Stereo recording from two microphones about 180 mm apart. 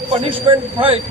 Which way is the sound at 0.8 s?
30° right (ahead or behind).